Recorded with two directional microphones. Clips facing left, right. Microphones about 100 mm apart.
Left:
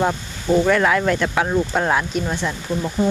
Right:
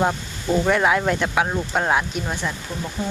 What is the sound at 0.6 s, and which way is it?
Speech, 15° right (ahead or behind).